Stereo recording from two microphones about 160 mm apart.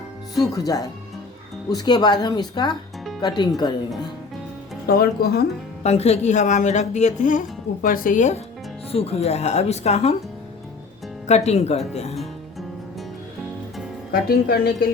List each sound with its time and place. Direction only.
0.3 s speech: 20° left (ahead or behind)
4.9 s a woman's voice: 75° left (ahead or behind)
5.8 s speech: 45° left (ahead or behind)
8.9 s speech: 40° left (ahead or behind)
11.3 s speech: 45° left (ahead or behind)
12.1 s music: centre (ahead or behind)
14.1 s a woman's voice: 70° left (ahead or behind)